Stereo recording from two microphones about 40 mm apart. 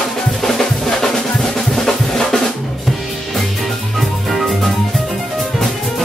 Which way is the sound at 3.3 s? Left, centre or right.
Centre.